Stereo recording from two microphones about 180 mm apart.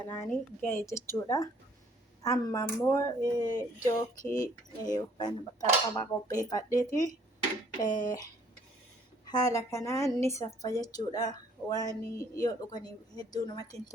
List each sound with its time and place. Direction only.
0.1 s a woman's voice: 10° left (ahead or behind)
9.2 s a woman's voice: 20° left (ahead or behind)